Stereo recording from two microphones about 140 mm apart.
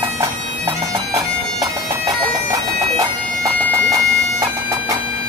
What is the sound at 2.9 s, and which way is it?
Bagpipes, 25° right (ahead or behind).